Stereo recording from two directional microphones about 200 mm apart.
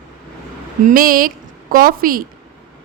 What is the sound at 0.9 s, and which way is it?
A woman's voice, 45° right (ahead or behind).